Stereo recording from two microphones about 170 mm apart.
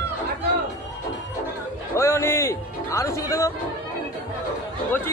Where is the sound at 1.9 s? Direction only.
15° left (ahead or behind).